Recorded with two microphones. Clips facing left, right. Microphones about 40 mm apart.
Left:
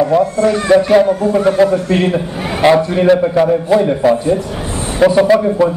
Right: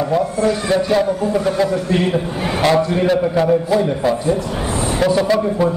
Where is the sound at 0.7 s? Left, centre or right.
Left.